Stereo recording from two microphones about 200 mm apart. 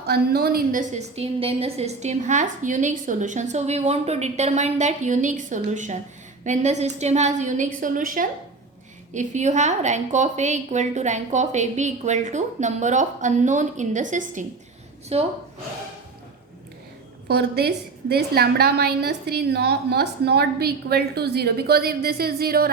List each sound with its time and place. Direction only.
0.0 s a woman's voice: 50° right (ahead or behind); by 15.3 s 30° right (ahead or behind)
17.2 s a woman's voice: 55° right (ahead or behind)